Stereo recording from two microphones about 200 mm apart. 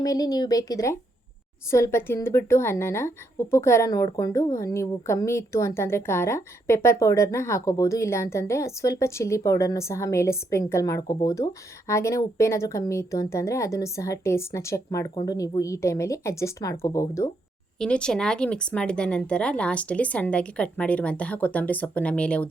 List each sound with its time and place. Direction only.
0.0 s a woman's voice: 20° left (ahead or behind)
17.7 s a woman's voice: 5° left (ahead or behind)